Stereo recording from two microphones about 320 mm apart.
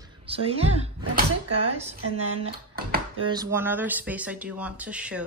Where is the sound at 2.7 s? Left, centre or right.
Right.